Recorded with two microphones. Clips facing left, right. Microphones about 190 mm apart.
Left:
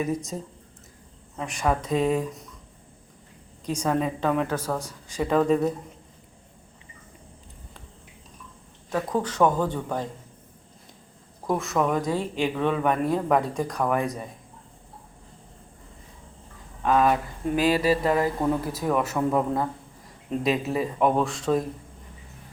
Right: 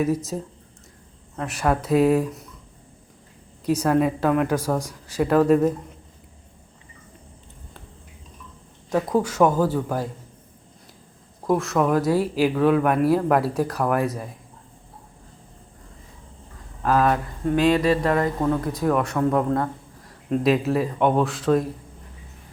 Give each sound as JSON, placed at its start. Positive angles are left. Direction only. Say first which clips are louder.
{"t": 0.0, "sound": "speech", "louder": "right 5 dB", "side_deg": -5}
{"t": 1.4, "sound": "speech", "louder": "right 3 dB", "side_deg": -5}
{"t": 3.7, "sound": "speech", "louder": "right 5 dB", "side_deg": -5}
{"t": 8.9, "sound": "speech", "louder": "right 5 dB", "side_deg": -10}
{"t": 11.4, "sound": "speech", "louder": "right 4 dB", "side_deg": 0}
{"t": 16.8, "sound": "speech", "louder": "right 1 dB", "side_deg": 0}